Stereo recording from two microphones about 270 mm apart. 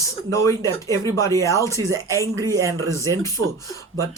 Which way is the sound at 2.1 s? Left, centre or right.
Centre.